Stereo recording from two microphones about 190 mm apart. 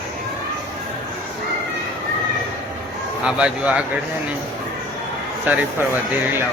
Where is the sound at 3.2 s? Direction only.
5° right (ahead or behind).